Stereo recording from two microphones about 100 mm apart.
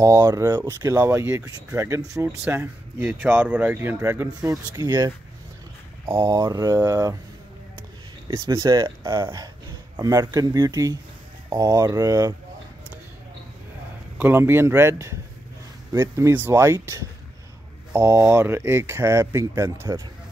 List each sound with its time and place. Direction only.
0.0 s speech: 35° right (ahead or behind)
2.2 s speech: 20° right (ahead or behind)
4.7 s speech: 40° right (ahead or behind)
6.2 s speech: 40° right (ahead or behind)
8.3 s speech: 35° right (ahead or behind)
14.1 s speech: 20° right (ahead or behind)